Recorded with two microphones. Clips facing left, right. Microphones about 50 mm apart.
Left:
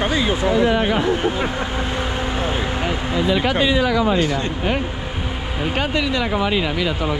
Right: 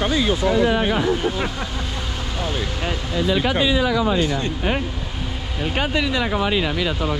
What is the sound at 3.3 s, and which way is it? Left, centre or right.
Speech, left.